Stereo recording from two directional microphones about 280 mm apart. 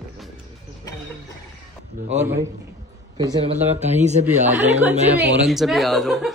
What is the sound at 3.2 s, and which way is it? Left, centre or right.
A man's voice, centre.